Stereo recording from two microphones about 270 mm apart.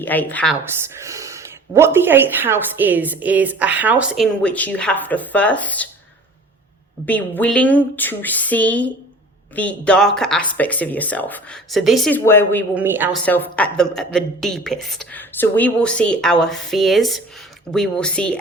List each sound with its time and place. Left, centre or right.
0.0 s a woman's voice: centre
0.6 s speech: centre
7.0 s speech: centre
12.7 s speech: centre
13.2 s speech: centre